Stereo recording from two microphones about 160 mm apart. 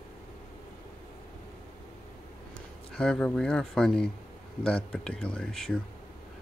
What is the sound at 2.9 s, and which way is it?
Speech, 5° left (ahead or behind).